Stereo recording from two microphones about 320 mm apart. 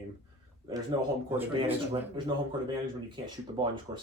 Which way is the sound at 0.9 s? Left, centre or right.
Centre.